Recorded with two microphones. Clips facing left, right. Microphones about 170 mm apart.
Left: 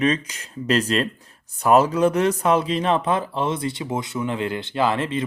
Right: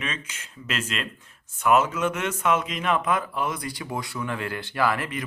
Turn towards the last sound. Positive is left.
turn(degrees=25)  # may be behind; listen again after turning